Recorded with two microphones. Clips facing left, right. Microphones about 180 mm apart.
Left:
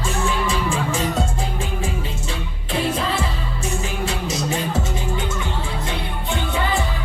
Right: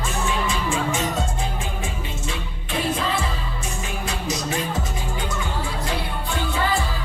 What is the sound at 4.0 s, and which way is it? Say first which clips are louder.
Music: left 1 dB; 30° left (ahead or behind).